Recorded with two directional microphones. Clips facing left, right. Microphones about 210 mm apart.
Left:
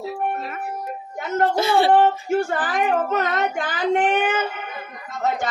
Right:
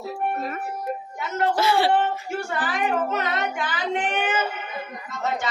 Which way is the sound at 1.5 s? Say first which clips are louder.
Left 1 dB; 20° left (ahead or behind).